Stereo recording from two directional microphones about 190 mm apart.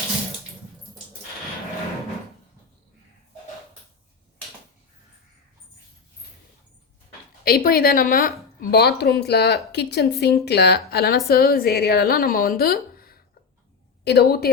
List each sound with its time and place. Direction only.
7.4 s a woman's voice: 50° left (ahead or behind)